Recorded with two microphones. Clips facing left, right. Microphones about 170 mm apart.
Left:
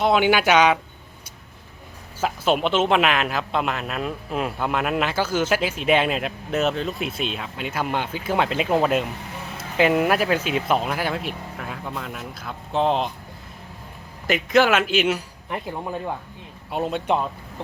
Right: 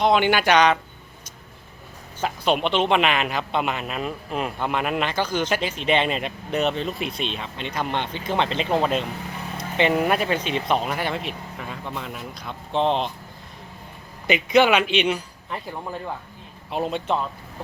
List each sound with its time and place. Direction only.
0.0 s speech: 5° left (ahead or behind)
2.2 s speech: 5° left (ahead or behind)
14.3 s speech: centre (ahead or behind)
15.4 s speech: 15° left (ahead or behind)
16.7 s speech: centre (ahead or behind)